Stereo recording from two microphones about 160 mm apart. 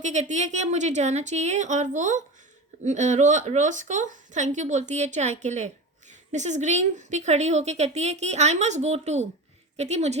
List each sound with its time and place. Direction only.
0.0 s a woman's voice: 50° right (ahead or behind)